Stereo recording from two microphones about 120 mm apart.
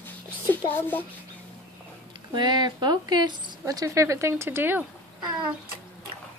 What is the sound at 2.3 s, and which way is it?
Speech, 35° right (ahead or behind).